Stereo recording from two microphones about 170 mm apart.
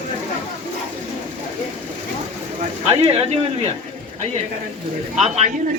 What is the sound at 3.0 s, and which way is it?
Speech, 35° right (ahead or behind).